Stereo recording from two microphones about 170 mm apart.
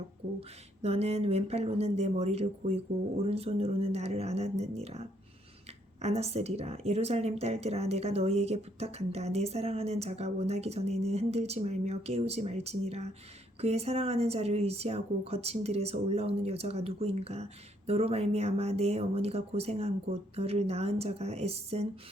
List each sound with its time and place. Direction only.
0.3 s a woman's voice: 35° right (ahead or behind)